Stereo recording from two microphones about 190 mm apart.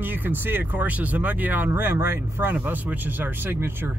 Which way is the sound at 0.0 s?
10° right (ahead or behind).